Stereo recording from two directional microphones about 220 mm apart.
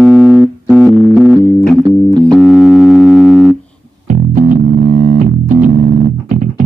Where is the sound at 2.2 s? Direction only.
Centre (ahead or behind).